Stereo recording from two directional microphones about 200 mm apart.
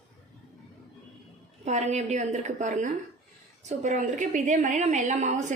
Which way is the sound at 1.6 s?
35° right (ahead or behind).